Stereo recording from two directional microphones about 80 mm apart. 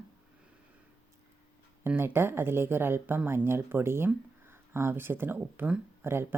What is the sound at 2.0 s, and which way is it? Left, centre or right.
Speech, right.